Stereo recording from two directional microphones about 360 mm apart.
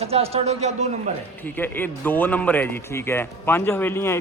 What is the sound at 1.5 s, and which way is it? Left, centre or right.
A man's voice, centre.